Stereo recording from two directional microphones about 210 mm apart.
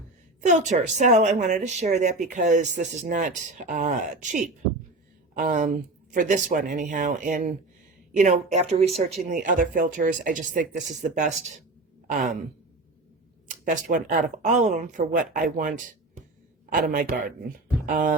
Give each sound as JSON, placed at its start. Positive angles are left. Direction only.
{"t": 0.4, "sound": "speech", "side_deg": -35}
{"t": 13.5, "sound": "speech", "side_deg": -40}
{"t": 17.8, "sound": "music", "side_deg": -40}